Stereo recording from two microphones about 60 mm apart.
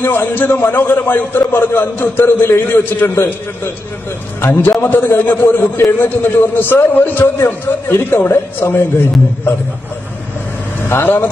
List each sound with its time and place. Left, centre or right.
0.0 s a man's voice: left
4.5 s a man's voice: left
7.3 s a man's voice: left
10.8 s speech: left